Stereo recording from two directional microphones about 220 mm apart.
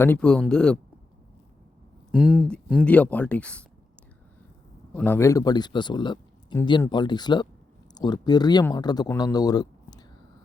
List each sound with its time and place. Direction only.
0.0 s speech: 5° left (ahead or behind)
2.1 s speech: 5° right (ahead or behind)
2.8 s speech: 5° left (ahead or behind)
4.9 s speech: 10° left (ahead or behind)